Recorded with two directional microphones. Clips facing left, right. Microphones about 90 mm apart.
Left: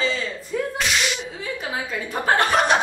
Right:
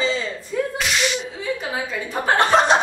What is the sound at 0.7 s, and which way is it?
Whip, centre (ahead or behind).